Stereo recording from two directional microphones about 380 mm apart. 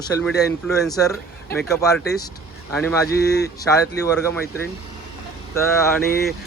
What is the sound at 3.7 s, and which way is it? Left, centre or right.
Speech, centre.